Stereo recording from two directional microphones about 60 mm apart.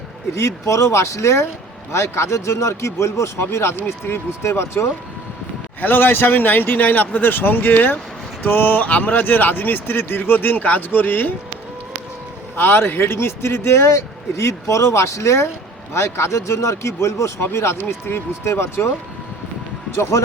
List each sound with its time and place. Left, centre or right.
0.3 s speech: left
5.8 s speech: left
12.5 s speech: left
20.0 s speech: left